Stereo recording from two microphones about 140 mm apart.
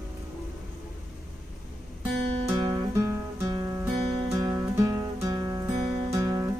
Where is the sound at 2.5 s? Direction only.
25° right (ahead or behind).